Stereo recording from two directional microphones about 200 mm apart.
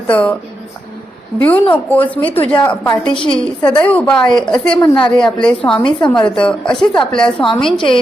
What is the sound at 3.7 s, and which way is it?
A woman's voice, 5° left (ahead or behind).